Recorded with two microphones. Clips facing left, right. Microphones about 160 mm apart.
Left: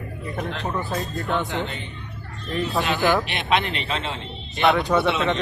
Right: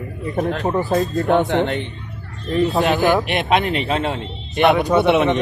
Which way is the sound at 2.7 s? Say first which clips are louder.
Right 4 dB; 40° right (ahead or behind).